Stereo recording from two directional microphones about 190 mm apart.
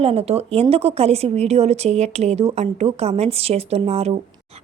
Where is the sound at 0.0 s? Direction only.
30° right (ahead or behind).